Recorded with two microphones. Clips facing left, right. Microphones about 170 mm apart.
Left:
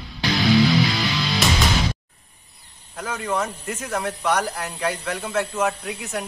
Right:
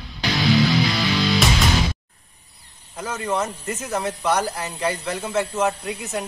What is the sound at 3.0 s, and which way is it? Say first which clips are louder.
A man's voice: right 1 dB; 5° right (ahead or behind).